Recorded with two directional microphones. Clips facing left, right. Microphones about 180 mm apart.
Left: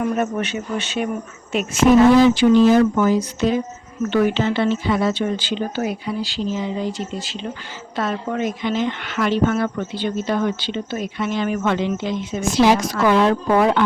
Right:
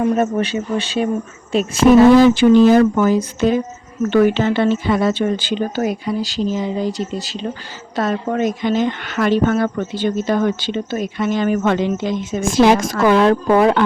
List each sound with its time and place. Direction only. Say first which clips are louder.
0.0 s speech: right 4 dB; 35° right (ahead or behind)
2.2 s a woman's voice: right 3 dB; 50° right (ahead or behind)